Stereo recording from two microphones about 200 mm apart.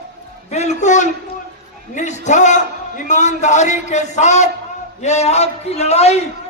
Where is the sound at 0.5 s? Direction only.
35° left (ahead or behind).